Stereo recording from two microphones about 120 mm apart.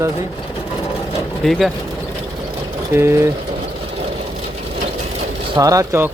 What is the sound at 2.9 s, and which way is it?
Speech, 20° right (ahead or behind).